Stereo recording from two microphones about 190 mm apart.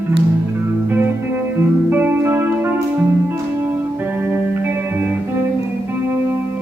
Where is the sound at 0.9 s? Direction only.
10° right (ahead or behind).